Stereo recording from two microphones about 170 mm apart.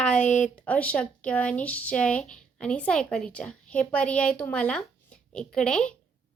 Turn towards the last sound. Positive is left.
turn(degrees=5)  # may be behind; listen again after turning